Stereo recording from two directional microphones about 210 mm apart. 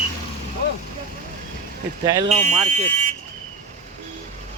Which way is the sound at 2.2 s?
35° right (ahead or behind).